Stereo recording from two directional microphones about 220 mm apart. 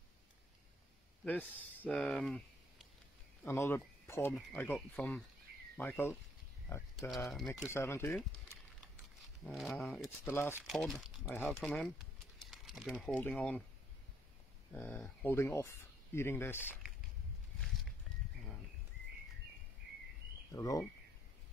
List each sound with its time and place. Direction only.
1.6 s speech: 5° left (ahead or behind)
3.4 s speech: 10° left (ahead or behind)
9.2 s speech: centre (ahead or behind)
14.7 s speech: 10° left (ahead or behind)
20.5 s speech: 15° left (ahead or behind)